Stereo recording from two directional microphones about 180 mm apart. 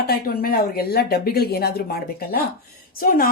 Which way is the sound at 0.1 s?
55° left (ahead or behind).